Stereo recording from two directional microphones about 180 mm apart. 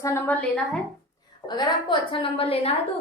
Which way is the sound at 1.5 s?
25° left (ahead or behind).